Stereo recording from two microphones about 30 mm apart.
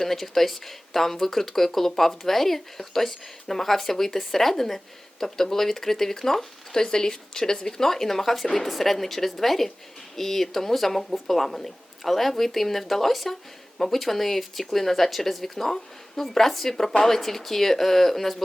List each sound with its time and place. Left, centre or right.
0.0 s speech: centre
6.7 s speech: left